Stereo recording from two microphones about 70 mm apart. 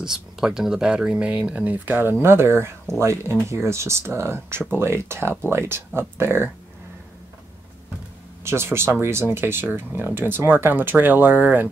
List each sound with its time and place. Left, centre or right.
0.0 s speech: centre; by 6.5 s right
8.5 s speech: right